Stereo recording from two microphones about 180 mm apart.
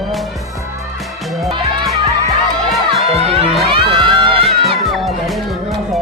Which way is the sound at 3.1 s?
35° right (ahead or behind).